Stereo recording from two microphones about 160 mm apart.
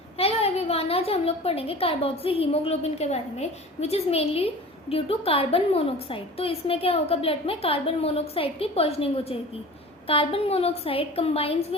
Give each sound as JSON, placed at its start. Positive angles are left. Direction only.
{"t": 0.2, "sound": "a woman's voice", "side_deg": 35}